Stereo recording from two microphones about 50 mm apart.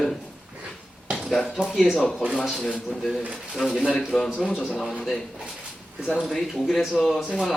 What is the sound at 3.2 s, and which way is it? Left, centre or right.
Speech, centre.